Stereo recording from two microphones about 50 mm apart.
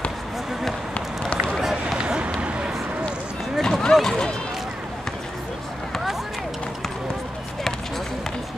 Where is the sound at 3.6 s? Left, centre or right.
Centre.